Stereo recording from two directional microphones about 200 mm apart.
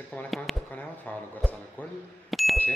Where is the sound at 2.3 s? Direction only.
Centre (ahead or behind).